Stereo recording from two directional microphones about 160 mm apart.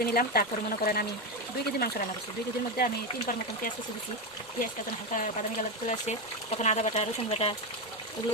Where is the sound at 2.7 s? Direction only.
60° left (ahead or behind).